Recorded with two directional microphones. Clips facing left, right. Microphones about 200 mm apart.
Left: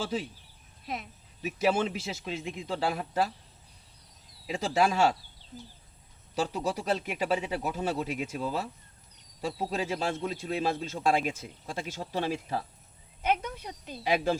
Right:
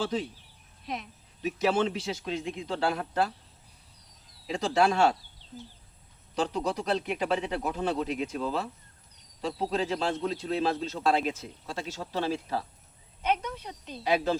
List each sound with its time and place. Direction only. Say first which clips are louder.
0.0 s a man's voice: right 2 dB; 10° left (ahead or behind)
4.4 s a man's voice: right 2 dB; 5° left (ahead or behind)
6.3 s a man's voice: right 1 dB; 10° left (ahead or behind)